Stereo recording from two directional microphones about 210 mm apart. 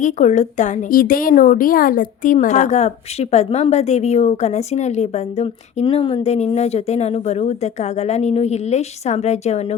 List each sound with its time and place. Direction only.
0.0 s a woman's voice: 35° left (ahead or behind)